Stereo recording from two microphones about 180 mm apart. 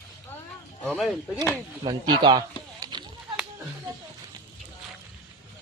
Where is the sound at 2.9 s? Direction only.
25° right (ahead or behind).